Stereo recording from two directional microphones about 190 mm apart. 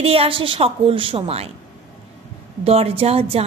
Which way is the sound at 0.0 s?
30° right (ahead or behind).